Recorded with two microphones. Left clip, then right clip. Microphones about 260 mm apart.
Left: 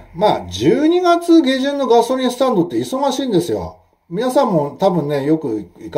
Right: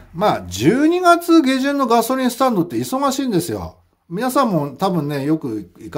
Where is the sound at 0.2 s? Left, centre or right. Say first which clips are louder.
Left 2 dB; right.